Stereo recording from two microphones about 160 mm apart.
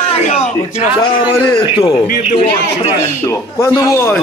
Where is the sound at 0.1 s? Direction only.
40° left (ahead or behind).